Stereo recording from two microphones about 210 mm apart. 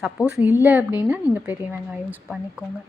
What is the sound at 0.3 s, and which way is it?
A woman's voice, 5° right (ahead or behind).